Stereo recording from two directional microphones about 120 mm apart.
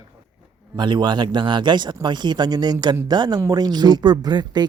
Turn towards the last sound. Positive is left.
turn(degrees=-35)  # may be behind; listen again after turning